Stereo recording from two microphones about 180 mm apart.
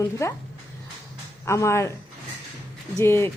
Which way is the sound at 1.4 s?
15° left (ahead or behind).